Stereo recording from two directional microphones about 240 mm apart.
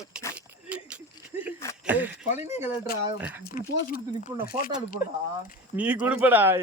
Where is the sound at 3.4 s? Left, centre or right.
Left.